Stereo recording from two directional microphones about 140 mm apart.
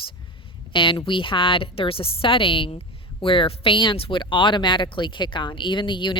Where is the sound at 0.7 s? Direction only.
35° left (ahead or behind).